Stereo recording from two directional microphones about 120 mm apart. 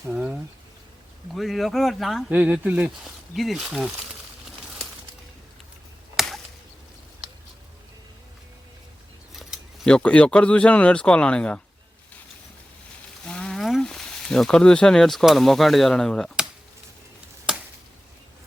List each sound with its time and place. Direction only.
0.0 s speech: 10° right (ahead or behind)
1.3 s speech: centre (ahead or behind)
2.3 s speech: 10° right (ahead or behind)
3.0 s speech: centre (ahead or behind)
6.1 s whip: centre (ahead or behind)
9.3 s speech: 5° left (ahead or behind)
13.2 s speech: 5° left (ahead or behind)